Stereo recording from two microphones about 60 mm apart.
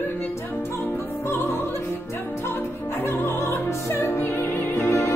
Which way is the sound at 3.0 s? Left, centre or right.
Left.